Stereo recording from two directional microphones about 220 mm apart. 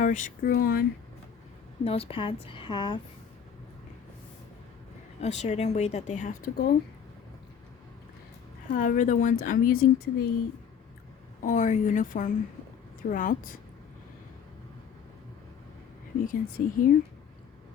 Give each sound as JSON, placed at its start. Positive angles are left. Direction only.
{"t": 0.0, "sound": "a woman's voice", "side_deg": 35}
{"t": 1.8, "sound": "a woman's voice", "side_deg": 25}
{"t": 5.2, "sound": "a woman's voice", "side_deg": 30}
{"t": 8.7, "sound": "a woman's voice", "side_deg": 40}
{"t": 11.4, "sound": "a woman's voice", "side_deg": 35}
{"t": 16.2, "sound": "a woman's voice", "side_deg": 40}